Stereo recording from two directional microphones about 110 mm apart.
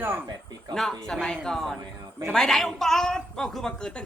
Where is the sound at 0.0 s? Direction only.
20° right (ahead or behind).